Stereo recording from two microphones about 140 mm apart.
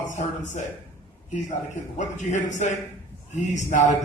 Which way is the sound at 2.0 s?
60° left (ahead or behind).